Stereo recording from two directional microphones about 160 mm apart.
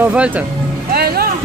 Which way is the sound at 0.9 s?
70° right (ahead or behind).